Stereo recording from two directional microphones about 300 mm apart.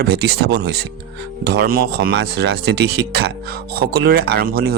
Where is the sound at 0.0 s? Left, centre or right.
Right.